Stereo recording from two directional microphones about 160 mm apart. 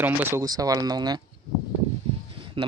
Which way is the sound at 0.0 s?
15° right (ahead or behind).